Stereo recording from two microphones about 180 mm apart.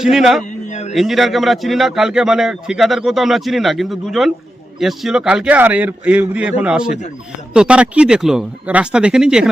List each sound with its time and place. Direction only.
0.0 s speech: centre (ahead or behind)
0.7 s a sound: 40° left (ahead or behind)
0.9 s speech: centre (ahead or behind)